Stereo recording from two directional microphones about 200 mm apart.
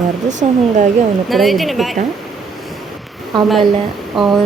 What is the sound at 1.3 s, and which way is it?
Speech, centre (ahead or behind).